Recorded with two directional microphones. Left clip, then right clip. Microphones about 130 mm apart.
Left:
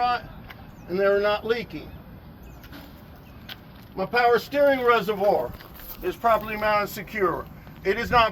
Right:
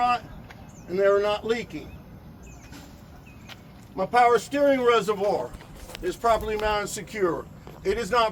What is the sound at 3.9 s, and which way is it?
Speech, 15° right (ahead or behind).